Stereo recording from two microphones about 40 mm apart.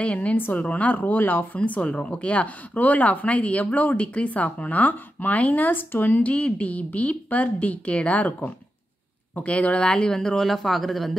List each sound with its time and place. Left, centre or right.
0.0 s speech: left
0.9 s speech: left
1.8 s speech: left
3.9 s speech: left
6.1 s speech: left
10.2 s speech: centre